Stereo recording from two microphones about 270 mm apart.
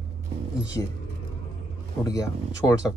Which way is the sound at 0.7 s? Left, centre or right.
Centre.